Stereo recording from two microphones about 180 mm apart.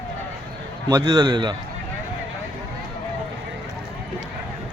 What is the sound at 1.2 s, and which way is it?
Speech, 25° right (ahead or behind).